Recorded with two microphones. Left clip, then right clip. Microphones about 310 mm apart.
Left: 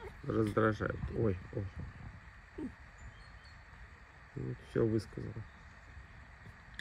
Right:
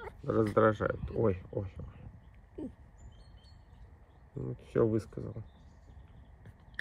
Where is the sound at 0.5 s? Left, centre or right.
Right.